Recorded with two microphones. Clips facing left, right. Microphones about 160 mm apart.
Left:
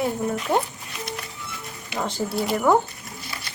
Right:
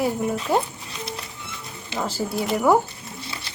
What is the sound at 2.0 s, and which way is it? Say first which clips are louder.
Speech: even; centre (ahead or behind).